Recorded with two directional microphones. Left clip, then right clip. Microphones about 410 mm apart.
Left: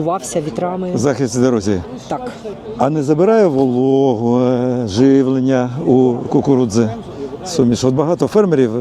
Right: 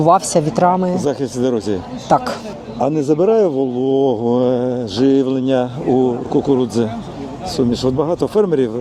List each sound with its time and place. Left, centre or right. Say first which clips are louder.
0.0 s speech: right 6 dB; centre
0.9 s speech: left 3 dB; left
2.1 s speech: right 9 dB; centre
2.7 s speech: left 1 dB; left
5.9 s speech: left 3 dB; centre